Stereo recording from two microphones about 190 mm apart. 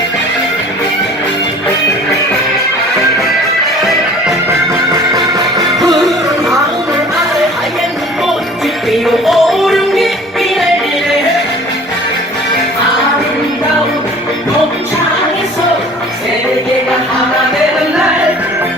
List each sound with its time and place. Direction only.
4.4 s music: 15° right (ahead or behind)
8.9 s music: centre (ahead or behind)